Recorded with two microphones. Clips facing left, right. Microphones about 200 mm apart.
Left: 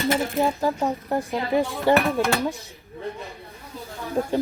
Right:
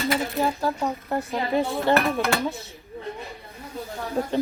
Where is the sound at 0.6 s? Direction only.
15° left (ahead or behind).